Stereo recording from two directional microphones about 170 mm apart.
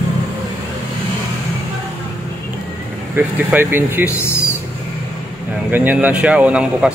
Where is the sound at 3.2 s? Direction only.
10° right (ahead or behind).